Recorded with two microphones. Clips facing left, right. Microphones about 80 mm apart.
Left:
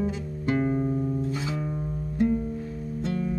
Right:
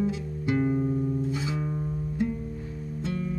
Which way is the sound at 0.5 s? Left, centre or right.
Left.